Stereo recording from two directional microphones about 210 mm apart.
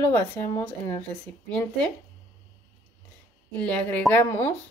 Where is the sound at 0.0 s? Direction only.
15° left (ahead or behind).